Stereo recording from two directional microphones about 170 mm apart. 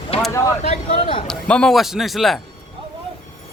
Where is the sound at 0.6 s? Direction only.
35° left (ahead or behind).